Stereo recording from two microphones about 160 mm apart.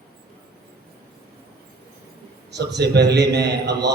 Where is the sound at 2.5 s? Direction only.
90° right.